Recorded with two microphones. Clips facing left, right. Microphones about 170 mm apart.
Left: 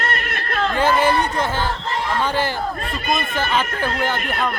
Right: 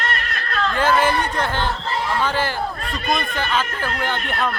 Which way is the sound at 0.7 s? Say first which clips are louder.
Left 1 dB; 10° left (ahead or behind).